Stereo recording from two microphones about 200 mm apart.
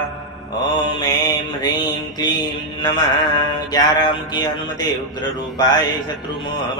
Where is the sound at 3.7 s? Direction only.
20° left (ahead or behind).